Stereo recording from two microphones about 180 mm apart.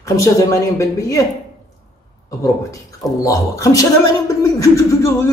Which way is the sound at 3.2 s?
20° left (ahead or behind).